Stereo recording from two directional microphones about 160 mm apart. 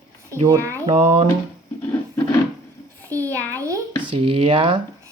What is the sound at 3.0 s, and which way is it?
Speech, 10° left (ahead or behind).